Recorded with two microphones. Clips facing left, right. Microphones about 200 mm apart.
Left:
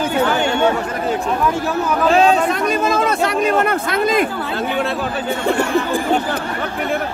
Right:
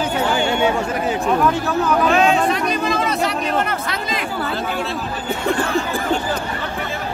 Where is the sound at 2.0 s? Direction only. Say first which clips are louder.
Left 5 dB; 35° left (ahead or behind).